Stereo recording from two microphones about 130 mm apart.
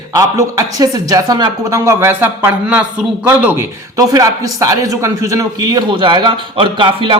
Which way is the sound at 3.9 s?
30° right (ahead or behind).